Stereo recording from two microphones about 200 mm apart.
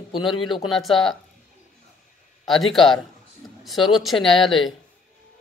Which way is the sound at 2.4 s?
Centre (ahead or behind).